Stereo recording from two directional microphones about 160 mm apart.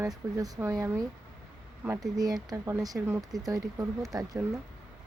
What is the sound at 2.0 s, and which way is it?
Speech, 25° right (ahead or behind).